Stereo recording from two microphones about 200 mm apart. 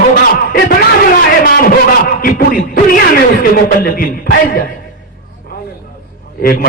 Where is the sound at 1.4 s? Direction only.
45° left (ahead or behind).